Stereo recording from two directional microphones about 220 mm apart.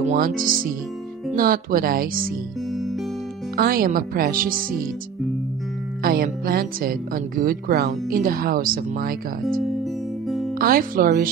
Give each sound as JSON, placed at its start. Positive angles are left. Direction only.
{"t": 0.0, "sound": "speech", "side_deg": -35}
{"t": 3.5, "sound": "speech", "side_deg": -40}
{"t": 6.0, "sound": "speech", "side_deg": -40}
{"t": 10.2, "sound": "music", "side_deg": 0}
{"t": 10.6, "sound": "speech", "side_deg": -40}